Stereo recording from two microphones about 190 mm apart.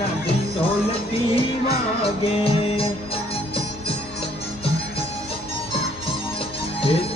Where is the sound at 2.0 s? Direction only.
30° left (ahead or behind).